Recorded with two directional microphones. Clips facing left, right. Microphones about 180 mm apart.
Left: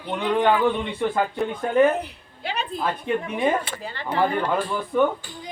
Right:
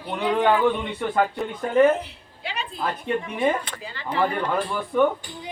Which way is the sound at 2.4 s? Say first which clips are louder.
Left 4 dB; 45° left (ahead or behind).